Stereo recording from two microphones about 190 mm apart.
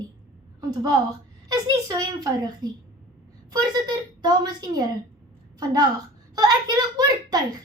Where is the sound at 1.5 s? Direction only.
20° right (ahead or behind).